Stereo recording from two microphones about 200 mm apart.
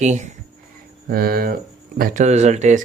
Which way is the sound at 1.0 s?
50° right (ahead or behind).